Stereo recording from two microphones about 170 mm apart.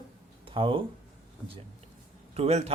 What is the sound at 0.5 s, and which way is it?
Speech, 30° right (ahead or behind).